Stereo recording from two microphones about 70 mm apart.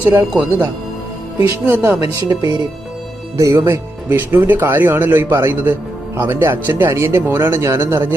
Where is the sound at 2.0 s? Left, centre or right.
Right.